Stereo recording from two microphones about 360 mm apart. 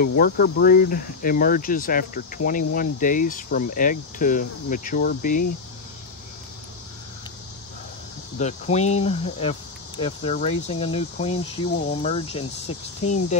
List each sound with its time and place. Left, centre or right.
0.0 s speech: left
8.4 s speech: centre
12.6 s speech: left